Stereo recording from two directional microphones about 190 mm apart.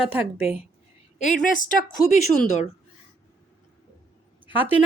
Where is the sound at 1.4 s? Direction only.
45° left (ahead or behind).